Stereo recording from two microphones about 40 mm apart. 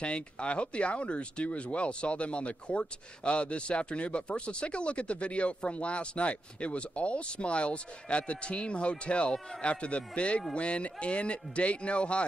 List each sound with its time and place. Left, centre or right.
0.0 s speech: left